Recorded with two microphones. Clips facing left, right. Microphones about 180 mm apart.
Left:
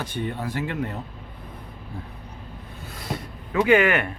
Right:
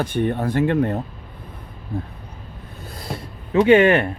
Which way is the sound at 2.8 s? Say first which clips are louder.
Right 1 dB; 35° right (ahead or behind).